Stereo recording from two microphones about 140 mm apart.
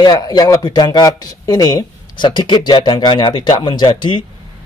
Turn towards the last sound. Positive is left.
turn(degrees=35)  # may be behind; listen again after turning